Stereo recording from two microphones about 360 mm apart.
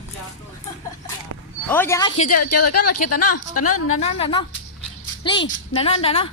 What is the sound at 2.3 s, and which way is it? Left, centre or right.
A woman's voice, left.